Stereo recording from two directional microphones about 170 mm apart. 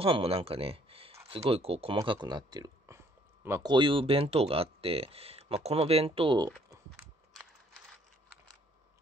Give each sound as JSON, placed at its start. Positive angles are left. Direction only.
{"t": 0.0, "sound": "speech", "side_deg": -35}
{"t": 2.0, "sound": "speech", "side_deg": -25}
{"t": 3.7, "sound": "speech", "side_deg": -30}